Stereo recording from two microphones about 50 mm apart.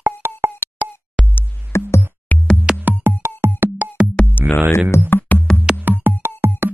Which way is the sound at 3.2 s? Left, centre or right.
Right.